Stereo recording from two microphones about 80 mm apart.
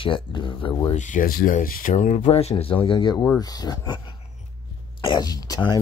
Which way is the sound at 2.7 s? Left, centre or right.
Left.